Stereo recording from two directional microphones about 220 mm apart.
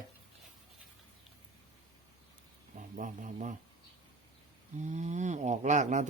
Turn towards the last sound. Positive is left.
turn(degrees=-30)  # may be behind; listen again after turning